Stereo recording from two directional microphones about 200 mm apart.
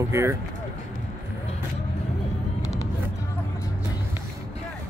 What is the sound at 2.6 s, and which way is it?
Vehicle, 15° left (ahead or behind).